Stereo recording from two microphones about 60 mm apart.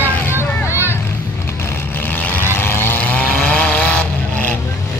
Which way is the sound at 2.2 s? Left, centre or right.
Left.